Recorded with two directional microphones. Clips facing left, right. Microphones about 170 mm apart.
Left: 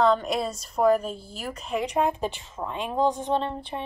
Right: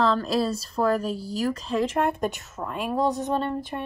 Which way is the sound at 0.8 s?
15° left (ahead or behind).